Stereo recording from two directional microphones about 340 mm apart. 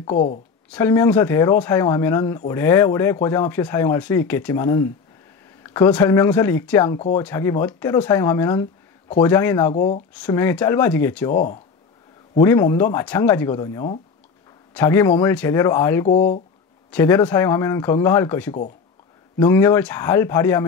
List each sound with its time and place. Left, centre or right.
0.1 s speech: centre
0.7 s speech: centre
9.8 s speech: centre
10.2 s speech: centre
11.3 s speech: left
12.4 s speech: centre
16.1 s speech: left
16.9 s speech: centre